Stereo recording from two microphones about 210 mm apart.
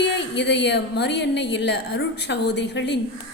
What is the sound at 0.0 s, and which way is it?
Speech, 55° left (ahead or behind).